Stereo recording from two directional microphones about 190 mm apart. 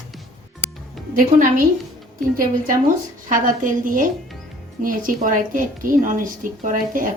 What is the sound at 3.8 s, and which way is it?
Speech, 45° right (ahead or behind).